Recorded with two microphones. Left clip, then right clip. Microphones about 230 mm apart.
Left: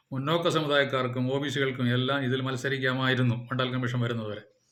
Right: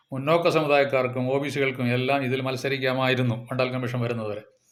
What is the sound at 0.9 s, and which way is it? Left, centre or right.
Speech, centre.